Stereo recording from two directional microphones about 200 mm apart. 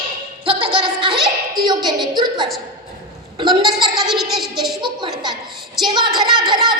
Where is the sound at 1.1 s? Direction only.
Centre (ahead or behind).